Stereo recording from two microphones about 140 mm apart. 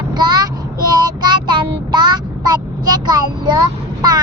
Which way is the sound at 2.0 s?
30° right (ahead or behind).